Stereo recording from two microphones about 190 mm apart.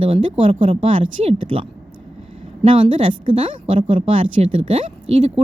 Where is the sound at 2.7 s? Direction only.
25° right (ahead or behind).